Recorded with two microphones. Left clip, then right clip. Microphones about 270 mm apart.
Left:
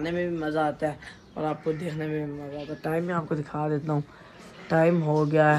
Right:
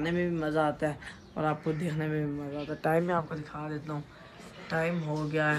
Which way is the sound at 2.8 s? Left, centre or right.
Right.